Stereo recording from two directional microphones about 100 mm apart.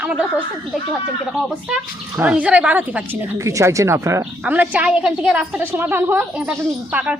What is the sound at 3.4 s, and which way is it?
Speech, 30° right (ahead or behind).